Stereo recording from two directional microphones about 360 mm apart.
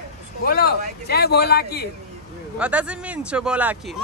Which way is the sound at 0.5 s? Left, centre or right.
Left.